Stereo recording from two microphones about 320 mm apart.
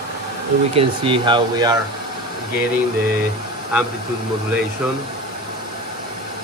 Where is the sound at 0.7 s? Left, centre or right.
Centre.